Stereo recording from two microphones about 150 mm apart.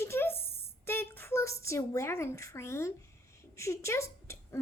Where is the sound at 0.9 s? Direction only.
15° left (ahead or behind).